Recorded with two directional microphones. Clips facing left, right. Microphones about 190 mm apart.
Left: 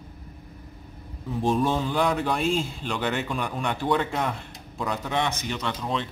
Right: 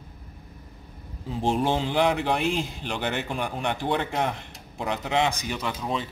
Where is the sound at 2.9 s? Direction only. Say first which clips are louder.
Left 2 dB; 55° right (ahead or behind).